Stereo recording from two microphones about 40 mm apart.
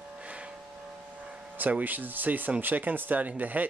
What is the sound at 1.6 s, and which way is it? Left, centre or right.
Speech, right.